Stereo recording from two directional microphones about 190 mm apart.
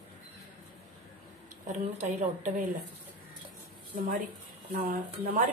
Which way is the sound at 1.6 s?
40° right (ahead or behind).